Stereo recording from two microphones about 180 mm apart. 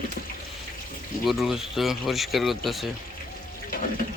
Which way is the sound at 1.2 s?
Centre (ahead or behind).